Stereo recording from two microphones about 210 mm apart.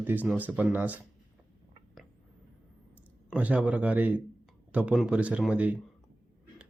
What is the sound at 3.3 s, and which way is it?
Speech, 5° right (ahead or behind).